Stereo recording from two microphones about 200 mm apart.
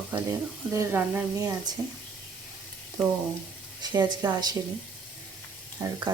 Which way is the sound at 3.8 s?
15° right (ahead or behind).